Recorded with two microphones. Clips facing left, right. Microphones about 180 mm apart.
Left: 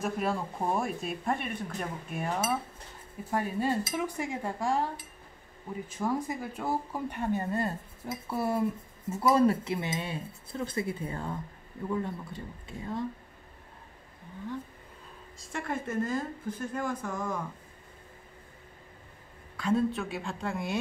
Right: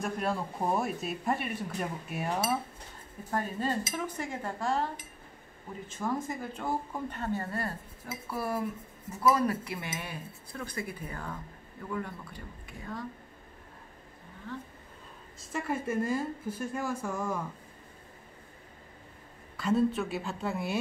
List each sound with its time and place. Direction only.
0.0 s speech: centre (ahead or behind)
3.3 s speech: 10° left (ahead or behind)
5.9 s speech: 10° left (ahead or behind); by 13.0 s 25° left (ahead or behind)
15.5 s a woman's voice: 5° right (ahead or behind)
19.5 s speech: centre (ahead or behind)